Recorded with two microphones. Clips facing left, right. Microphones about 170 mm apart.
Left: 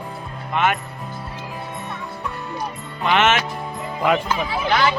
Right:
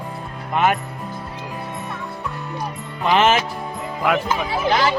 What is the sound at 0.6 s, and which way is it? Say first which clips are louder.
Music: right 2 dB; 40° right (ahead or behind).